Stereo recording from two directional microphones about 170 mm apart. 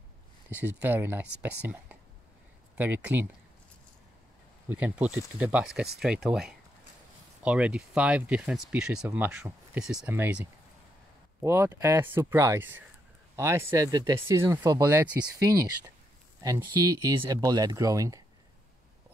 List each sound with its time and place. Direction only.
0.5 s speech: 10° right (ahead or behind)
2.8 s speech: 10° right (ahead or behind)
4.6 s speech: 10° right (ahead or behind)